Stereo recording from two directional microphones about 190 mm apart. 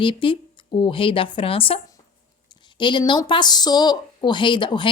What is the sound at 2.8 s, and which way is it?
Speech, 25° left (ahead or behind).